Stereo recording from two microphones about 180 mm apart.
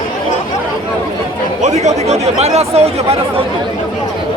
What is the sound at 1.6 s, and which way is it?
Speech, 40° right (ahead or behind).